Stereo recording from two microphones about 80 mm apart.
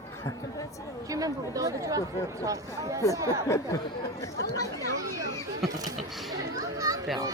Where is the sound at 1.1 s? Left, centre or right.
Right.